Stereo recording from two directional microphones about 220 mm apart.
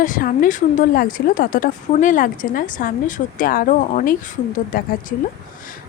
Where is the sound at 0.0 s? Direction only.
40° left (ahead or behind).